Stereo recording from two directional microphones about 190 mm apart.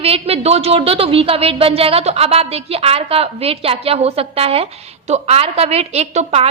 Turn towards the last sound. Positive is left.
turn(degrees=-35)  # may be behind; listen again after turning